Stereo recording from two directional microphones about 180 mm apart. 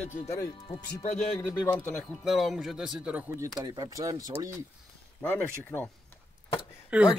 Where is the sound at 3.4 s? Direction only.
25° right (ahead or behind).